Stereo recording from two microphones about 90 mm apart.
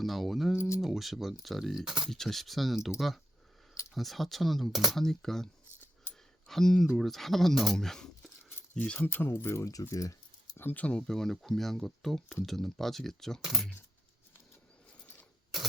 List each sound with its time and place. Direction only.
0.0 s speech: centre (ahead or behind)
3.9 s speech: centre (ahead or behind)
6.5 s speech: 5° left (ahead or behind)
9.0 s speech: 25° left (ahead or behind)
9.8 s a sound: 35° left (ahead or behind)
10.6 s speech: 20° left (ahead or behind); by 13.7 s 5° right (ahead or behind)